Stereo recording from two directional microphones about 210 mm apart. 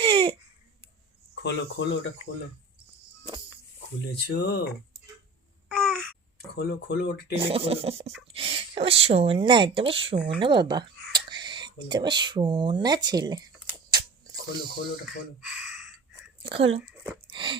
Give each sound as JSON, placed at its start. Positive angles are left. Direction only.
{"t": 0.0, "sound": "a sound", "side_deg": -25}
{"t": 1.4, "sound": "speech", "side_deg": 55}
{"t": 4.1, "sound": "speech", "side_deg": 50}
{"t": 5.6, "sound": "babbling", "side_deg": 5}
{"t": 6.6, "sound": "speech", "side_deg": 50}
{"t": 7.3, "sound": "speech", "side_deg": -25}
{"t": 13.9, "sound": "mechanisms", "side_deg": -20}
{"t": 15.0, "sound": "speech", "side_deg": 0}
{"t": 16.4, "sound": "speech", "side_deg": -25}
{"t": 16.8, "sound": "speech", "side_deg": -10}
{"t": 17.3, "sound": "a sound", "side_deg": -25}